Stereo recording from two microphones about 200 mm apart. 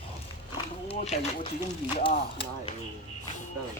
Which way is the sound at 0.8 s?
35° left (ahead or behind).